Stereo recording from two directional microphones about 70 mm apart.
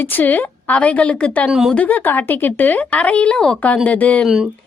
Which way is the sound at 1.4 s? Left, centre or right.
Centre.